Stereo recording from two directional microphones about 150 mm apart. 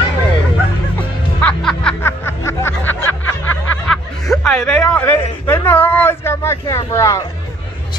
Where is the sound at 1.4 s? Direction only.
5° left (ahead or behind).